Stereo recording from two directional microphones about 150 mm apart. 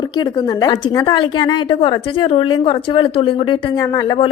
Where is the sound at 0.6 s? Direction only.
25° left (ahead or behind).